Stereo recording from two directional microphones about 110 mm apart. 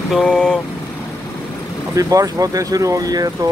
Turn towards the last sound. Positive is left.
turn(degrees=-35)  # may be behind; listen again after turning